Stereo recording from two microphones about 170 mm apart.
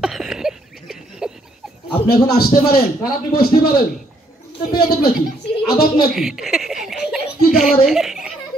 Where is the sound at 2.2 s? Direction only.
65° left (ahead or behind).